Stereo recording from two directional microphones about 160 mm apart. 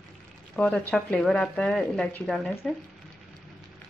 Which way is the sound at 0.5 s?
5° left (ahead or behind).